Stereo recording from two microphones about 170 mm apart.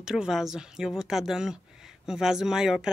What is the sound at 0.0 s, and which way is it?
Speech, 5° right (ahead or behind).